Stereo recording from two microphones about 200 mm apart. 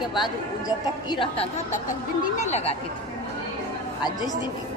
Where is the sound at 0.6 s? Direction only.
20° left (ahead or behind).